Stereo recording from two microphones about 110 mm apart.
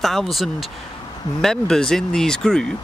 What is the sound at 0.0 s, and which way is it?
Speech, centre (ahead or behind).